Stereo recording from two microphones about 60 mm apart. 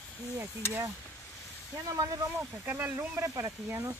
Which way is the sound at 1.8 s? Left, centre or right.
Right.